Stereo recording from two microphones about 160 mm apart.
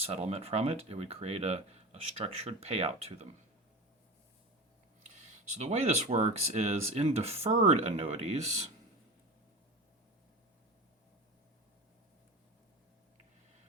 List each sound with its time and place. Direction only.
0.0 s speech: 40° right (ahead or behind)
5.5 s speech: 45° right (ahead or behind)